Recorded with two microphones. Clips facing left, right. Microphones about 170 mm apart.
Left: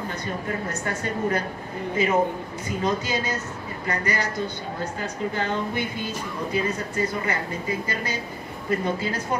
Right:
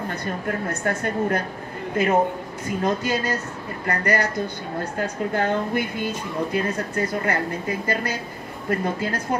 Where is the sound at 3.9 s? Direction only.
55° right (ahead or behind).